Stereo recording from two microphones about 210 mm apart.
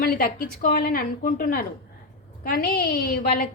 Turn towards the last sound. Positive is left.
turn(degrees=45)  # may be behind; listen again after turning